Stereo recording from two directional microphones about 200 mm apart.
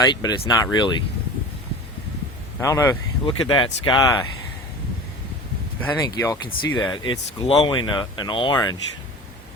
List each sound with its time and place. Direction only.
0.0 s speech: 20° left (ahead or behind)
2.6 s speech: 15° left (ahead or behind)
3.2 s speech: 25° left (ahead or behind)
5.8 s speech: 10° left (ahead or behind)